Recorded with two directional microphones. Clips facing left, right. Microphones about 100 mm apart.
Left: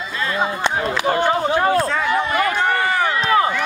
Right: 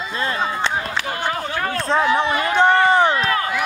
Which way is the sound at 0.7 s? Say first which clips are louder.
Left 5 dB; 20° left (ahead or behind).